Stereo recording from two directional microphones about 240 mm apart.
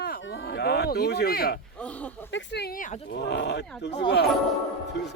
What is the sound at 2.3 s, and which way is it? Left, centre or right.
Speech, left.